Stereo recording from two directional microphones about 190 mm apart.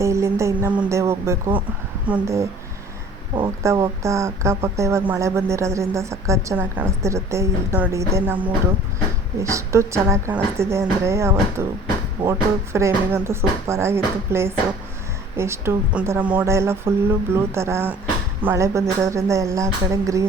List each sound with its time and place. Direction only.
0.0 s music: 15° right (ahead or behind)
2.0 s speech: 10° right (ahead or behind)